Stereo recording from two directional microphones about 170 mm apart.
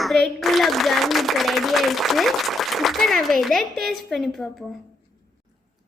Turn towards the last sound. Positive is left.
turn(degrees=0)  # may be behind; listen again after turning